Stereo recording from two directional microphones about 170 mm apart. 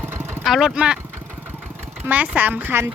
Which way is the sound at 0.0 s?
15° right (ahead or behind).